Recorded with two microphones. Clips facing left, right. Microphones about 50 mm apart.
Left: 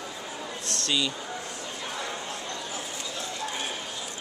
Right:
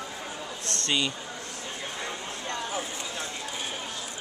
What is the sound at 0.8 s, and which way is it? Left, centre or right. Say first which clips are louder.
Speech: even; right.